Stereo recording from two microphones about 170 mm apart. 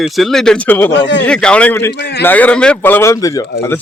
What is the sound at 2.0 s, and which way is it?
Speech, 70° left (ahead or behind).